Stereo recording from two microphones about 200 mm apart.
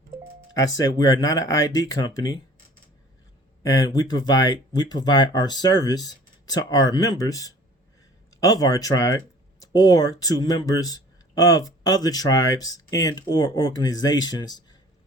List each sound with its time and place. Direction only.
0.5 s speech: 15° left (ahead or behind)
3.6 s speech: 20° left (ahead or behind)